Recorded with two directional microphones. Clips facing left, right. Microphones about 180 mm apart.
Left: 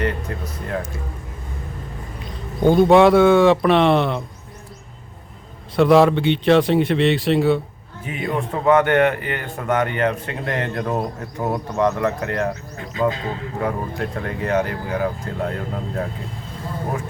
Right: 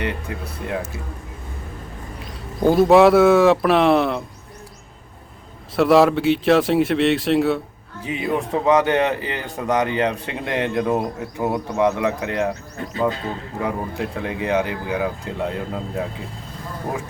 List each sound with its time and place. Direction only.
0.0 s speech: 10° right (ahead or behind)
2.6 s speech: centre (ahead or behind)
5.7 s speech: centre (ahead or behind)
8.0 s speech: 20° right (ahead or behind)
13.7 s speech: 15° right (ahead or behind)